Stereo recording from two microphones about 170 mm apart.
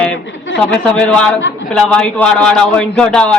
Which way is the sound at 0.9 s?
5° left (ahead or behind).